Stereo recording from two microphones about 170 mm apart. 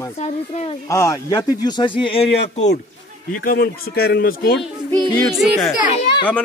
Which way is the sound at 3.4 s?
70° left (ahead or behind).